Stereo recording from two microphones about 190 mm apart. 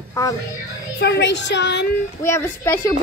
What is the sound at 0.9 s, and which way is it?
Speech, 65° left (ahead or behind).